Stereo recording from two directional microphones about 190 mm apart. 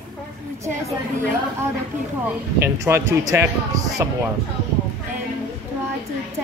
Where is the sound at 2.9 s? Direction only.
15° right (ahead or behind).